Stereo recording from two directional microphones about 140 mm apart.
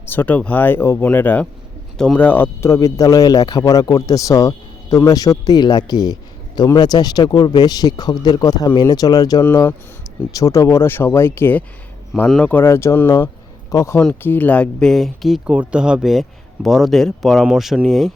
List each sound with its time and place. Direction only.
0.0 s speech: 15° left (ahead or behind); by 18.1 s centre (ahead or behind)